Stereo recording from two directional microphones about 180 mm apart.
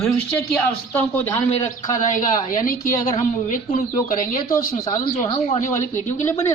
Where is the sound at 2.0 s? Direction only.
45° left (ahead or behind).